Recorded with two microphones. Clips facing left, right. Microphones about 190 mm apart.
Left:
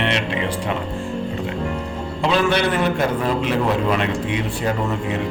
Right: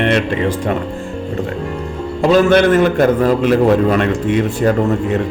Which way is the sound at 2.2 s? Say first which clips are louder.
Right 8 dB; 45° right (ahead or behind).